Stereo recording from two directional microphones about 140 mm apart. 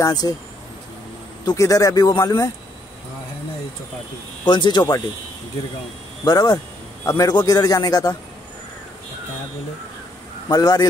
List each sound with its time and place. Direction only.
0.0 s a man's voice: 30° left (ahead or behind)
1.4 s a man's voice: 25° left (ahead or behind)
4.5 s speech: 35° left (ahead or behind)
6.2 s a man's voice: 30° left (ahead or behind)
10.5 s a man's voice: 30° left (ahead or behind)